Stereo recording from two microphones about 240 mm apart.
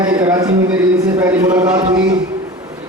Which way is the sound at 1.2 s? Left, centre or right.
Centre.